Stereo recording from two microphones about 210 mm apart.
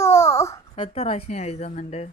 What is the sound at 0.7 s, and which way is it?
Speech, 25° left (ahead or behind).